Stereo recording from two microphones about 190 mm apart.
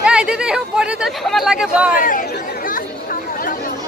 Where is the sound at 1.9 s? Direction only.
45° left (ahead or behind).